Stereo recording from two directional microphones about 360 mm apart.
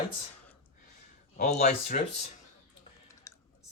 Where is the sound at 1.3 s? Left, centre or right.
Centre.